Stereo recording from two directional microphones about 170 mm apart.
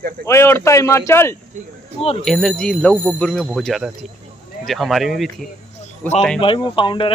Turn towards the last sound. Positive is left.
turn(degrees=30)  # may be behind; listen again after turning